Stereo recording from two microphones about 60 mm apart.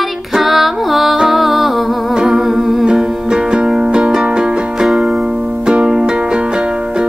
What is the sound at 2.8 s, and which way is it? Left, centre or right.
Music, centre.